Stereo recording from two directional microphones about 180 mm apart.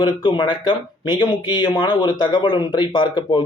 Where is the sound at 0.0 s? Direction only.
25° left (ahead or behind).